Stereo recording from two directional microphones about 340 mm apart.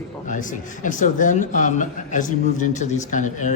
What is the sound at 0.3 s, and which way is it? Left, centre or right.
Speech, left.